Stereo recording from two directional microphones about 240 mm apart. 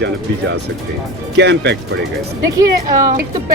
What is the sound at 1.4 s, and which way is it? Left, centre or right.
Speech, right.